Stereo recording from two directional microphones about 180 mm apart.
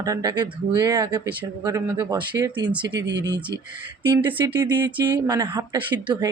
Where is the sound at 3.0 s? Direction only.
75° right (ahead or behind).